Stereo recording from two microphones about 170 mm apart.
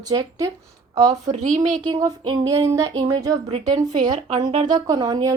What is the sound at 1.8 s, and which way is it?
A woman's voice, 25° right (ahead or behind).